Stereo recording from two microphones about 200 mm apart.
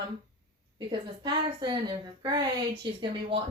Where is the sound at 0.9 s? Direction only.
20° right (ahead or behind).